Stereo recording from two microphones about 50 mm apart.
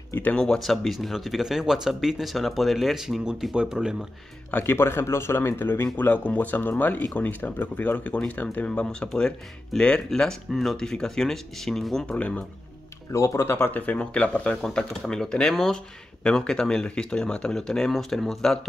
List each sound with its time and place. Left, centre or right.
0.1 s speech: left
0.6 s speech: centre
3.5 s speech: centre
4.6 s speech: left
5.9 s speech: left; by 10.3 s centre
10.5 s speech: centre
12.1 s speech: left
13.1 s speech: left
13.7 s speech: left; by 18.6 s centre